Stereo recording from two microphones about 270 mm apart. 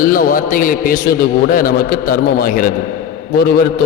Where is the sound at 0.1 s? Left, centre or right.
Left.